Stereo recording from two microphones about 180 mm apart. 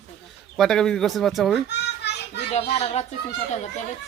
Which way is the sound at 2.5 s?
35° left (ahead or behind).